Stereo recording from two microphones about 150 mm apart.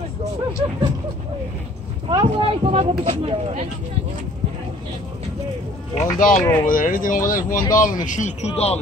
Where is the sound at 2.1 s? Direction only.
35° right (ahead or behind).